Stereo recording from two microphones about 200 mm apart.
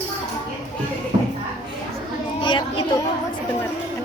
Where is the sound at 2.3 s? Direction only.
25° left (ahead or behind).